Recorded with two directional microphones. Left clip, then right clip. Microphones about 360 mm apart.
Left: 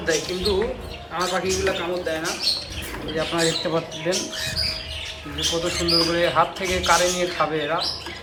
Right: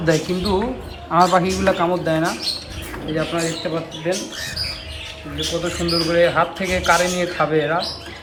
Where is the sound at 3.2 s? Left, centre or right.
Centre.